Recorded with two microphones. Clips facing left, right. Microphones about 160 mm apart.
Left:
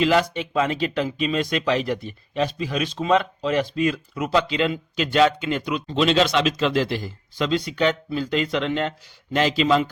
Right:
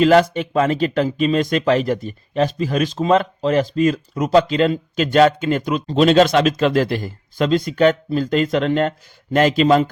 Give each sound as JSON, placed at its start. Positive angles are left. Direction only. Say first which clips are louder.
{"t": 0.0, "sound": "speech", "louder": "right 6 dB", "side_deg": -45}